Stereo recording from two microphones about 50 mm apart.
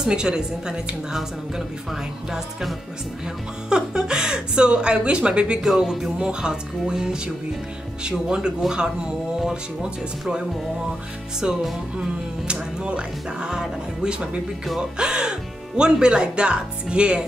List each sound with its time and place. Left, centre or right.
0.0 s a woman's voice: centre
5.6 s a woman's voice: centre
11.4 s speech: centre
12.8 s speech: centre